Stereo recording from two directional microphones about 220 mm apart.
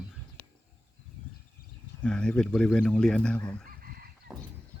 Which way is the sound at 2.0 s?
5° left (ahead or behind).